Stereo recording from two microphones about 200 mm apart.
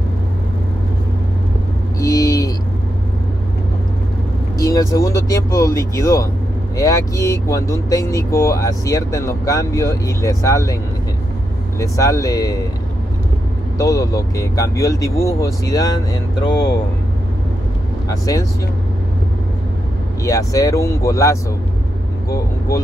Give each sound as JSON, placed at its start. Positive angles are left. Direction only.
{"t": 2.0, "sound": "vehicle", "side_deg": 15}
{"t": 4.6, "sound": "speech", "side_deg": 15}
{"t": 11.8, "sound": "speech", "side_deg": 15}
{"t": 13.7, "sound": "speech", "side_deg": 15}
{"t": 18.0, "sound": "speech", "side_deg": 15}
{"t": 20.2, "sound": "speech", "side_deg": 15}